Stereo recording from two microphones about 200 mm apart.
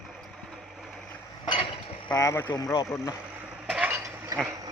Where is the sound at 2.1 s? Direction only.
15° left (ahead or behind).